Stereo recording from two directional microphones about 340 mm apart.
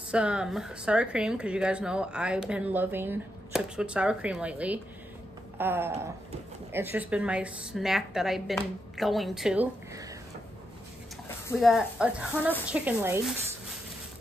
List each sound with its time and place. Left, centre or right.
0.1 s a woman's voice: centre
5.6 s a sound: centre
6.7 s a woman's voice: centre
11.2 s a woman's voice: centre